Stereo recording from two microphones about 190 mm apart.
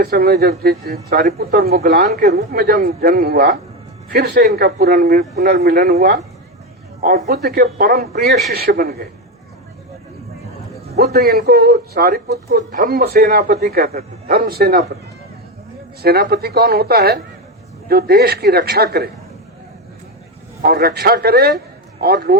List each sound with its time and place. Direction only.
0.0 s a man's voice: 55° right (ahead or behind)
10.9 s a man's voice: 55° right (ahead or behind)
16.0 s a man's voice: 55° right (ahead or behind)
20.6 s a man's voice: 55° right (ahead or behind)